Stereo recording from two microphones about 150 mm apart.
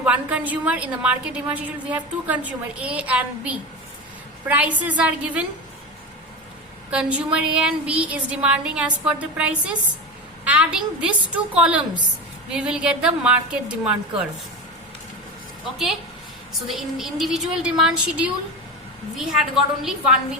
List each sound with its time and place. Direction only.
0.0 s a woman's voice: 10° right (ahead or behind)
6.9 s a woman's voice: 10° right (ahead or behind)
16.6 s a woman's voice: centre (ahead or behind)